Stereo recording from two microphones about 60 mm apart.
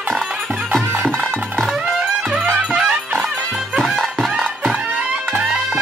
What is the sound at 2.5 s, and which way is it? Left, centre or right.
Music, centre.